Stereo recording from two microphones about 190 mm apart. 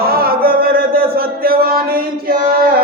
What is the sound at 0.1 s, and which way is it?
Chant, 50° right (ahead or behind).